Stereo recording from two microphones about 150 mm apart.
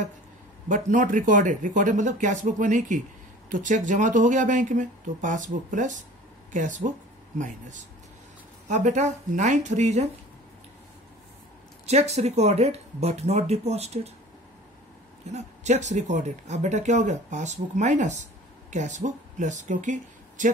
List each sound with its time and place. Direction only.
0.7 s speech: 60° right (ahead or behind)
11.8 s speech: 45° right (ahead or behind)
15.3 s speech: 50° right (ahead or behind)